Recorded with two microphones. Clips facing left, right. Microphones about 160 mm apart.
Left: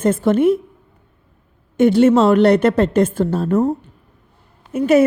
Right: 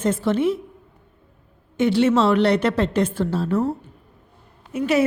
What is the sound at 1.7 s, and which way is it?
A woman's voice, 50° left (ahead or behind).